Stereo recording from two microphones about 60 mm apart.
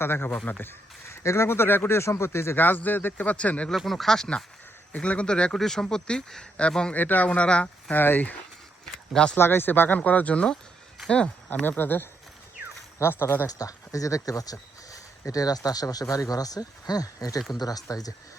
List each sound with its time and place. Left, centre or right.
0.0 s speech: left
1.1 s speech: left
2.0 s speech: left
2.6 s speech: left
3.8 s speech: centre
4.9 s speech: left
6.9 s speech: left
7.3 s speech: centre
7.9 s speech: left
9.4 s speech: left
10.0 s speech: left
11.8 s speech: left
13.5 s speech: left